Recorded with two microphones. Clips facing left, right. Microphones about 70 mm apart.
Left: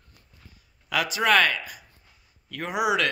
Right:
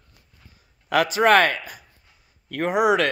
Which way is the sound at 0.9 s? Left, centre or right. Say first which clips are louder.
Right 5 dB; right.